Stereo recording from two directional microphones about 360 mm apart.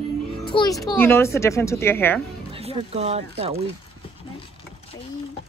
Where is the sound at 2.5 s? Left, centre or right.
Centre.